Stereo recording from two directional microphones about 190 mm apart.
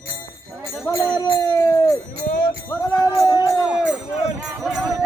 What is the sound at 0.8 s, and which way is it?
Speech, 15° left (ahead or behind).